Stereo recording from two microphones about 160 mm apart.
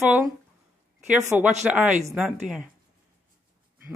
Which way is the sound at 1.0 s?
10° right (ahead or behind).